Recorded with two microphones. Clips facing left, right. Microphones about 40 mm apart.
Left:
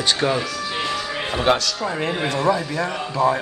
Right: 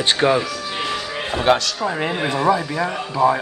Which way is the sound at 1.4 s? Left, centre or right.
Centre.